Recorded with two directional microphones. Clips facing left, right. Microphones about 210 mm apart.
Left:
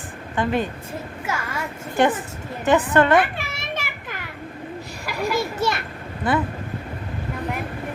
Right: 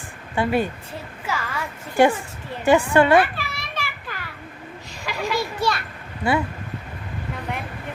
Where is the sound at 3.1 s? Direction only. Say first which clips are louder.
Right 1 dB; 20° left (ahead or behind).